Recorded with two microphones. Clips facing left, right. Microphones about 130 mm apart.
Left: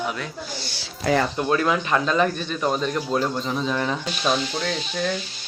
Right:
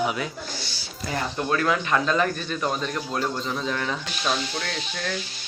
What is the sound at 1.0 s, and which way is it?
Speech, 90° left.